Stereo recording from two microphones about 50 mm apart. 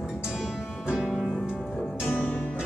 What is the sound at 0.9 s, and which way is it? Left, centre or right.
Music, centre.